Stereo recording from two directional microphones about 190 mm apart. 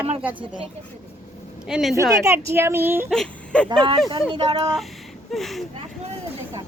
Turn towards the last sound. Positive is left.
turn(degrees=0)  # may be behind; listen again after turning